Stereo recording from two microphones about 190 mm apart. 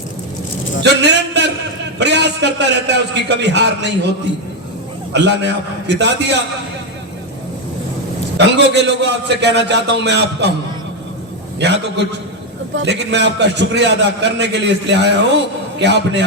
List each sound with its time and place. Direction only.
0.8 s a sound: 65° right (ahead or behind)
2.0 s a man's voice: 65° right (ahead or behind)
5.1 s a man's voice: 65° right (ahead or behind)
8.4 s a man's voice: 65° right (ahead or behind)
11.6 s a man's voice: 65° right (ahead or behind)